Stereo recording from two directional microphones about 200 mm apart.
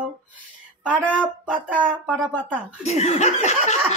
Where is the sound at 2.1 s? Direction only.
5° left (ahead or behind).